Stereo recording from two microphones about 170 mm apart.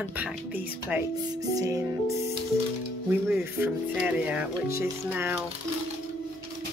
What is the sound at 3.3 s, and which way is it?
Speech, 10° right (ahead or behind).